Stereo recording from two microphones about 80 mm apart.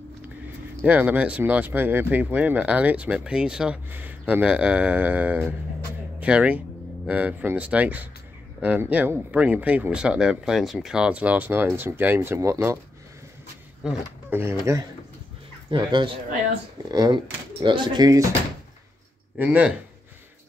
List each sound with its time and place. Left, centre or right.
0.8 s speech: centre
3.9 s speech: right
13.8 s speech: centre
14.3 s speech: right
15.7 s speech: right
17.1 s speech: right
19.3 s speech: right